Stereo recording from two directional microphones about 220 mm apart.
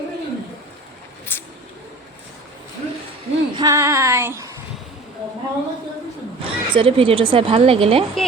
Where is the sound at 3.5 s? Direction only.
15° right (ahead or behind).